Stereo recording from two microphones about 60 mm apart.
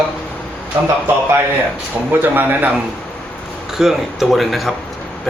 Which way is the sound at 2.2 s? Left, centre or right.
Right.